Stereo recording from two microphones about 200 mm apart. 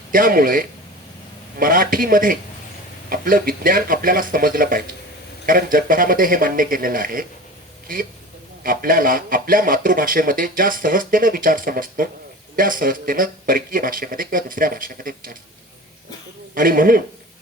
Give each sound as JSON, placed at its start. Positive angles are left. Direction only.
{"t": 0.1, "sound": "speech", "side_deg": -45}
{"t": 8.6, "sound": "speech", "side_deg": -45}
{"t": 16.6, "sound": "speech", "side_deg": -45}